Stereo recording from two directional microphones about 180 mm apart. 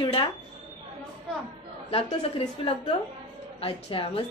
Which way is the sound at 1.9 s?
35° left (ahead or behind).